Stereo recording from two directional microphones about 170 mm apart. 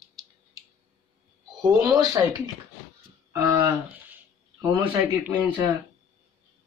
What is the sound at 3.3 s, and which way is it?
Speech, 15° right (ahead or behind).